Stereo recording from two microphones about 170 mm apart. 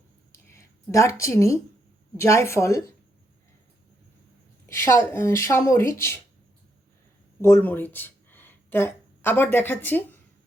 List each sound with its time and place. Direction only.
0.5 s a sound: 15° left (ahead or behind)
1.2 s speech: 15° left (ahead or behind)
4.7 s speech: 15° left (ahead or behind)
7.4 s speech: 15° left (ahead or behind)